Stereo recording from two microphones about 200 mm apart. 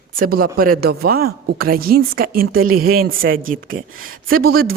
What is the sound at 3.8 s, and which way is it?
Speech, 90° right.